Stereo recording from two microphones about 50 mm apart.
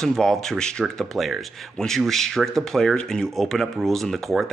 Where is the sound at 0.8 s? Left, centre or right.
Centre.